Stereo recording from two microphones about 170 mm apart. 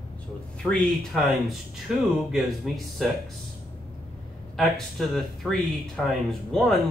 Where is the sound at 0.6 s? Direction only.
5° left (ahead or behind).